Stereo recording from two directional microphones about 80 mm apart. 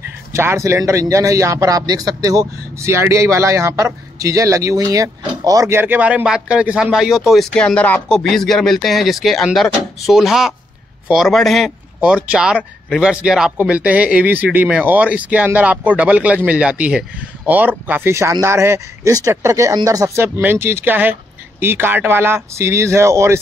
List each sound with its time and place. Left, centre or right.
0.3 s speech: right
2.9 s speech: right
5.7 s speech: right; by 7.4 s centre
7.5 s speech: centre
8.1 s speech: centre
12.0 s speech: centre
18.4 s speech: right
19.7 s speech: right
20.2 s speech: right